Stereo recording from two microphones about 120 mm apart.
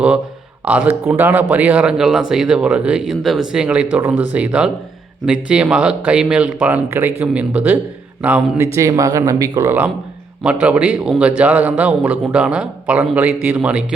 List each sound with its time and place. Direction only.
0.6 s speech: 15° right (ahead or behind)
8.6 s speech: 25° right (ahead or behind)